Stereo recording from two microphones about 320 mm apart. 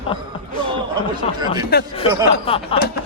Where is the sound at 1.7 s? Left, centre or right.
Left.